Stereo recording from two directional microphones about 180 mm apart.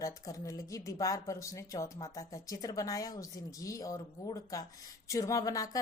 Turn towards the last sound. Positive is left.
turn(degrees=20)  # may be behind; listen again after turning